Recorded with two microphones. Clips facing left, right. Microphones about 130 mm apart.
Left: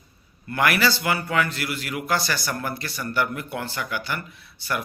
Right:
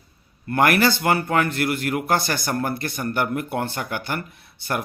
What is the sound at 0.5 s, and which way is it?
A man's voice, 50° right (ahead or behind).